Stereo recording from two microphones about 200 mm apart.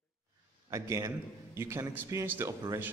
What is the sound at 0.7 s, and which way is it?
A man's voice, 15° right (ahead or behind).